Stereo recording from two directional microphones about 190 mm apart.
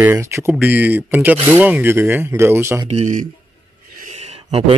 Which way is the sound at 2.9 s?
40° right (ahead or behind).